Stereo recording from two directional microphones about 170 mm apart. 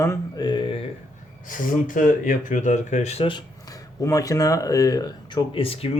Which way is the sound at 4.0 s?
20° left (ahead or behind).